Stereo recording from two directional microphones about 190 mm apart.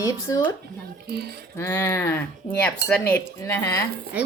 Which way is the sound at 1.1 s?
60° right (ahead or behind).